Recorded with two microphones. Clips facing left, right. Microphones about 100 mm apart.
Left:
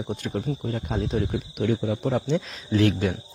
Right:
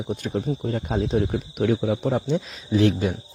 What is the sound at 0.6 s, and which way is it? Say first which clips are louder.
Speech: right 3 dB; 45° right (ahead or behind).